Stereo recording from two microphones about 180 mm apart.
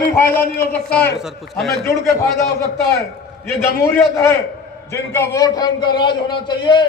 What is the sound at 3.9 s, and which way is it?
A man's voice, 15° left (ahead or behind).